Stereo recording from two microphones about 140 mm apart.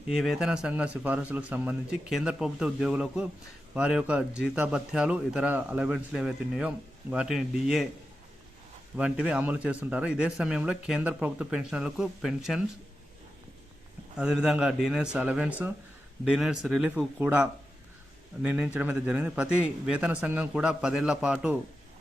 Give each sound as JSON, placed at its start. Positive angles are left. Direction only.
{"t": 0.1, "sound": "a man's voice", "side_deg": -5}
{"t": 9.0, "sound": "speech", "side_deg": -10}
{"t": 14.2, "sound": "speech", "side_deg": -5}